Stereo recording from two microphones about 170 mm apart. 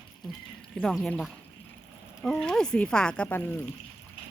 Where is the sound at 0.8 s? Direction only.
Centre (ahead or behind).